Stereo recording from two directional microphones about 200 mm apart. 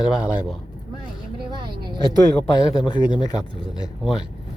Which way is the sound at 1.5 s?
20° right (ahead or behind).